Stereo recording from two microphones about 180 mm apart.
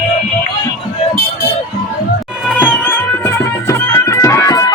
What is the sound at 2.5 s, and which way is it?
Music, 10° left (ahead or behind).